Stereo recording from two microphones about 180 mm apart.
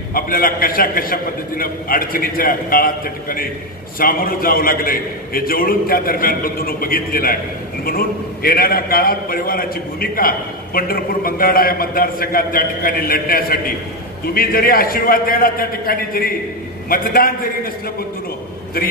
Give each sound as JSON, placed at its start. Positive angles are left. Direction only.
{"t": 0.1, "sound": "a man's voice", "side_deg": 55}